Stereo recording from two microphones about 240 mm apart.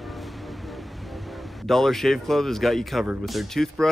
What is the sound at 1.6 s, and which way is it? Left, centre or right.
Speech, centre.